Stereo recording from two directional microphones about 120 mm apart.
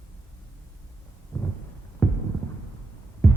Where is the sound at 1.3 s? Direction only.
15° left (ahead or behind).